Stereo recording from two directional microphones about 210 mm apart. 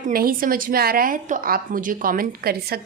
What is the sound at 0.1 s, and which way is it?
A woman's voice, 45° right (ahead or behind).